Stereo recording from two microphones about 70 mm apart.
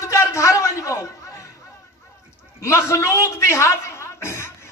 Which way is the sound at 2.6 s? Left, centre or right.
Left.